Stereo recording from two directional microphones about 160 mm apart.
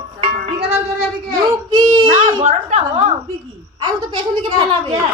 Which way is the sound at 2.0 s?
50° right (ahead or behind).